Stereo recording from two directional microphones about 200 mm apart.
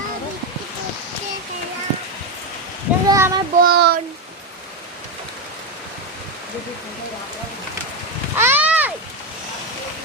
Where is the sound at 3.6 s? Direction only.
50° right (ahead or behind).